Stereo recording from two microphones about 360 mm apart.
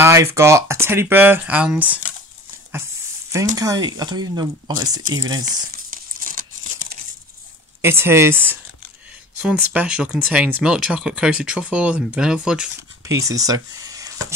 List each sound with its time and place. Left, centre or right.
0.0 s speech: centre
3.5 s speech: centre
5.4 s crumpling: right
7.8 s speech: centre